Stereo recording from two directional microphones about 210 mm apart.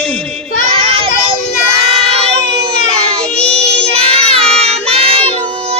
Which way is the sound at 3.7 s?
30° right (ahead or behind).